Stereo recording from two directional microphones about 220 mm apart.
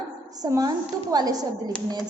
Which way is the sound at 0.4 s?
15° right (ahead or behind).